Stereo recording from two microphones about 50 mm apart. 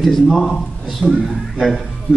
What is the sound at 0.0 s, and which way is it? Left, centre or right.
Speech, centre.